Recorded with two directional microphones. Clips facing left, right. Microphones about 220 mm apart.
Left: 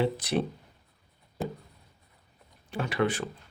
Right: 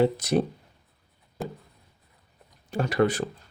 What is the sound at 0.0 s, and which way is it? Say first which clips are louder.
Speech: right 5 dB; 45° right (ahead or behind).